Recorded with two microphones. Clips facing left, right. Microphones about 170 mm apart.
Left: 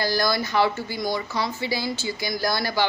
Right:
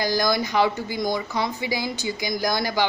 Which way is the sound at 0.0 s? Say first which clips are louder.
Right 1 dB; 15° right (ahead or behind).